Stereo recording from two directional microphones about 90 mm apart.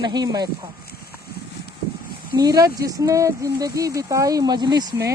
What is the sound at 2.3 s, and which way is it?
Speech, 45° right (ahead or behind).